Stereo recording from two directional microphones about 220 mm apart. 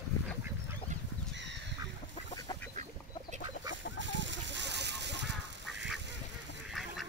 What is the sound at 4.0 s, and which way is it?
Water, 55° right (ahead or behind).